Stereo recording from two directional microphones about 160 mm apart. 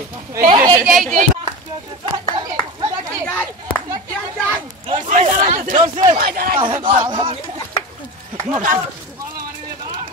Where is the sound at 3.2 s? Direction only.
10° left (ahead or behind).